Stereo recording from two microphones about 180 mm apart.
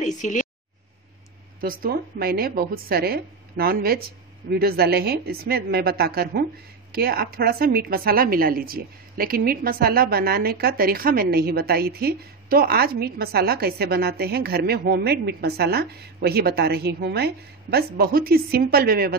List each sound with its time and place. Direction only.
0.0 s speech: 40° left (ahead or behind)
1.6 s a woman's voice: 55° right (ahead or behind)